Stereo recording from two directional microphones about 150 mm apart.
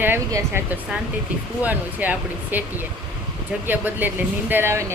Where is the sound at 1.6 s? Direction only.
10° right (ahead or behind).